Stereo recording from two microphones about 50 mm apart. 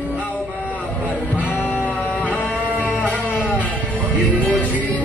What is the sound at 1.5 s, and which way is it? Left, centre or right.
Music, left.